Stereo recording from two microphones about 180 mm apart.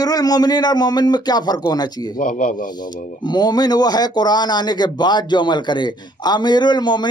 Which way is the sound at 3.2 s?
25° left (ahead or behind).